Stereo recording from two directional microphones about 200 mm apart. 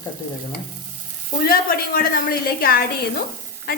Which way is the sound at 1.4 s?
45° left (ahead or behind).